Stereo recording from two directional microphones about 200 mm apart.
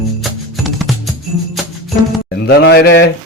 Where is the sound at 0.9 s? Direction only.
Centre (ahead or behind).